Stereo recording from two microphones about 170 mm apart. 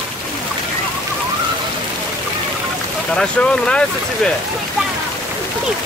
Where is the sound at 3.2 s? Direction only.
5° left (ahead or behind).